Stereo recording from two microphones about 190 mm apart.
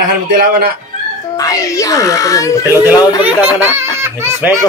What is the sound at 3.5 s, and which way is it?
Speech, 10° right (ahead or behind).